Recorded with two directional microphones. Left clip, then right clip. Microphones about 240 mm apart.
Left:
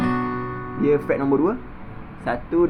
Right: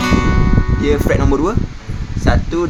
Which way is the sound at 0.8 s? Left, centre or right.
Right.